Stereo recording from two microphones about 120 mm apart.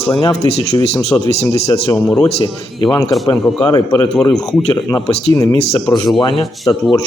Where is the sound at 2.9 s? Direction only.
25° left (ahead or behind).